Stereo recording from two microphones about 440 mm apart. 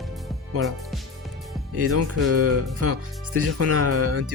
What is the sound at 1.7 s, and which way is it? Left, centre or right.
Speech, right.